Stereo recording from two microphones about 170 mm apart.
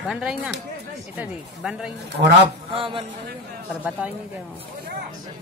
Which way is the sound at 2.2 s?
45° right (ahead or behind).